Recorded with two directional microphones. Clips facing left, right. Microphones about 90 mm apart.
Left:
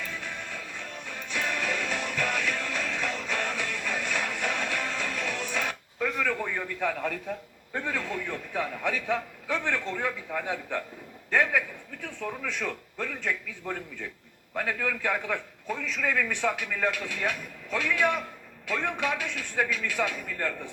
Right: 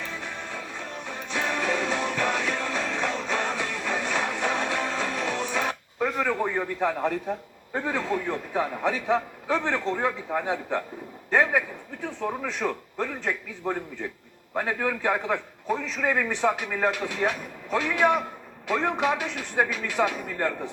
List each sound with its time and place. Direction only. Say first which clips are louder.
0.0 s music: right 2 dB; 20° right (ahead or behind)
11.3 s a man's voice: right 3 dB; 25° right (ahead or behind)